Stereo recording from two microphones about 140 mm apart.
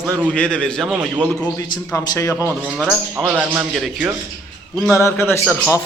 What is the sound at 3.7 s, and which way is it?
A man's voice, centre (ahead or behind).